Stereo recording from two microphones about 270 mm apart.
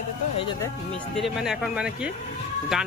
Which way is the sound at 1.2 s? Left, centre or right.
Centre.